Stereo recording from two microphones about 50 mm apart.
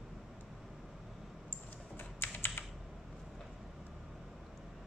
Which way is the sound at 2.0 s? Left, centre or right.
Left.